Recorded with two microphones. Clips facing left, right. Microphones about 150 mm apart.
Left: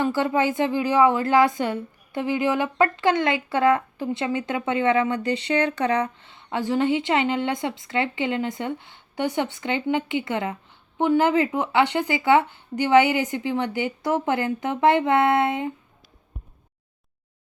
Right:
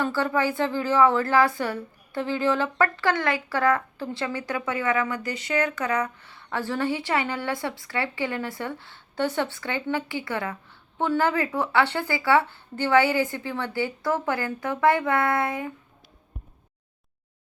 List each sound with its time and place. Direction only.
0.0 s speech: 20° left (ahead or behind)